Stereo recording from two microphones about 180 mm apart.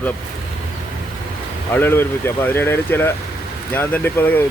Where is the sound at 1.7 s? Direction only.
10° left (ahead or behind).